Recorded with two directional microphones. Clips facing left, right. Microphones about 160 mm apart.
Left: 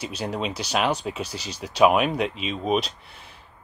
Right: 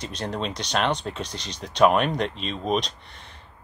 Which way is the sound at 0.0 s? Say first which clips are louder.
Left 1 dB; 5° left (ahead or behind).